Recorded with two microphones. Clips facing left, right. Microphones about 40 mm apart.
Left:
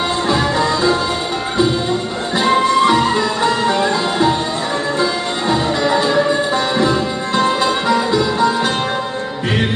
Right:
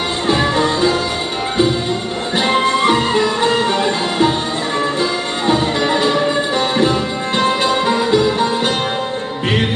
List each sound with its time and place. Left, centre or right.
0.3 s music: right
2.3 s music: right
5.5 s music: right